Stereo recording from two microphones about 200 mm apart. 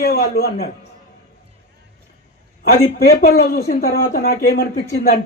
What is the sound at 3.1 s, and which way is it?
Speech, 55° left (ahead or behind).